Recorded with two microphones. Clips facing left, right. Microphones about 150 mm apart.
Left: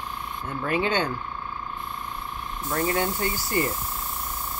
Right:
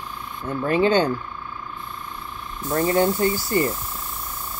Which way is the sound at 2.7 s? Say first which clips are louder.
Right 6 dB; 35° right (ahead or behind).